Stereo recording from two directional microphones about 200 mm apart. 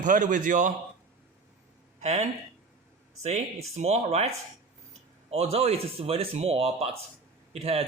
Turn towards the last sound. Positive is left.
turn(degrees=-30)  # may be behind; listen again after turning